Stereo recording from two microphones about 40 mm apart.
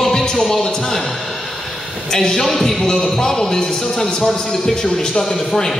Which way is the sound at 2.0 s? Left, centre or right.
Centre.